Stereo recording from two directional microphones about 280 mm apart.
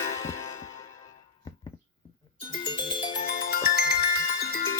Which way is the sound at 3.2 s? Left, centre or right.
Left.